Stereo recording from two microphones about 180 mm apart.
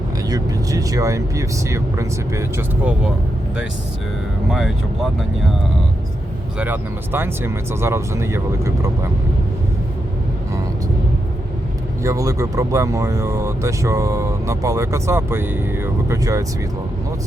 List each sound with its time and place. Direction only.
0.3 s speech: 20° right (ahead or behind)
4.4 s speech: centre (ahead or behind)
6.6 s speech: 10° right (ahead or behind)
12.0 s speech: 20° right (ahead or behind)